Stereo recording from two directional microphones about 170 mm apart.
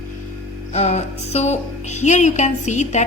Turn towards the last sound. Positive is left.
turn(degrees=45)  # may be behind; listen again after turning